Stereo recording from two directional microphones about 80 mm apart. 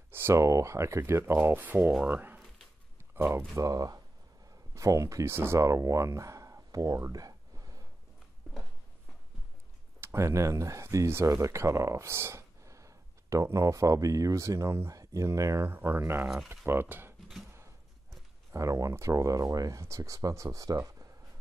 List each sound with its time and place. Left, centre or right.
0.1 s speech: right
3.5 s speech: right
9.9 s speech: right
15.7 s speech: right
18.5 s speech: right